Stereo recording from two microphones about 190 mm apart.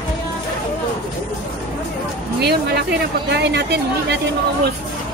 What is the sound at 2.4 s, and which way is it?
Speech, 60° right (ahead or behind).